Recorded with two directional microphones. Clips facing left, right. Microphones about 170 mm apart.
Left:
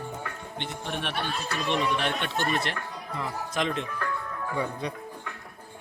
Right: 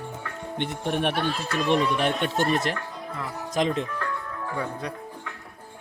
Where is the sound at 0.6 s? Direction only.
50° right (ahead or behind).